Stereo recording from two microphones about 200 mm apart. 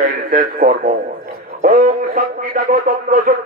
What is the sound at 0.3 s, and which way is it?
A man's voice, 45° right (ahead or behind).